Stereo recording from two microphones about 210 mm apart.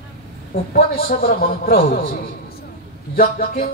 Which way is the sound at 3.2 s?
45° left (ahead or behind).